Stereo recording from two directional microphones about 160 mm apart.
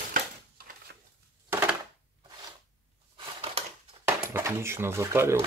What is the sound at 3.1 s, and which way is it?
Crushing, 35° right (ahead or behind).